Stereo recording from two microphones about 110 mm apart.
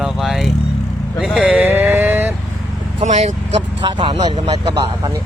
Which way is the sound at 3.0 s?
90° right.